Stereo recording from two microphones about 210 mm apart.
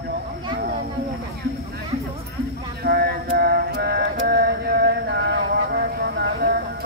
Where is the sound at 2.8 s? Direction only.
50° right (ahead or behind).